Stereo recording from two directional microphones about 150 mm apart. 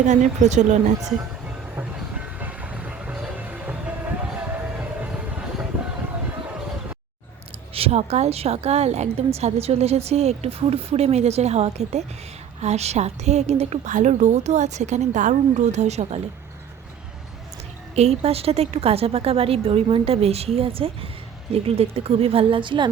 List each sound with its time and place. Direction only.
0.0 s a woman's voice: 55° right (ahead or behind)
1.0 s train: 10° right (ahead or behind)
4.4 s a sound: 10° right (ahead or behind)
7.7 s a woman's voice: 40° right (ahead or behind)
17.9 s a woman's voice: 45° right (ahead or behind)